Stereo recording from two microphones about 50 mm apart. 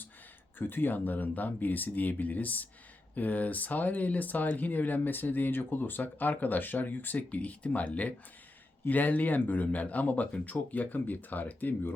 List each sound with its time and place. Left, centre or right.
0.6 s speech: left